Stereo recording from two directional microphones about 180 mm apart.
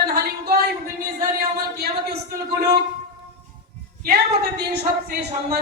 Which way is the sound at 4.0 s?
65° right (ahead or behind).